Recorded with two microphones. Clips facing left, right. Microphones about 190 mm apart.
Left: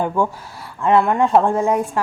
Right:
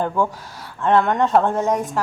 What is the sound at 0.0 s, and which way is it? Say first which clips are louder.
Speech: left 1 dB; 10° left (ahead or behind).